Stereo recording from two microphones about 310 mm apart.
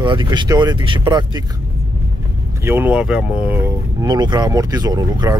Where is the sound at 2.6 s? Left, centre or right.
Centre.